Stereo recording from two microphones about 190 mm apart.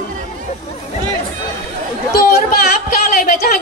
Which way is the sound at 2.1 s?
50° left (ahead or behind).